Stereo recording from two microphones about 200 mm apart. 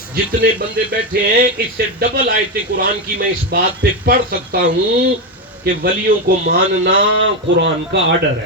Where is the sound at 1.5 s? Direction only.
50° right (ahead or behind).